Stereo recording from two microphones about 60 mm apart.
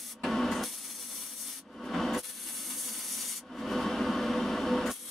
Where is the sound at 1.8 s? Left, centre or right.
Centre.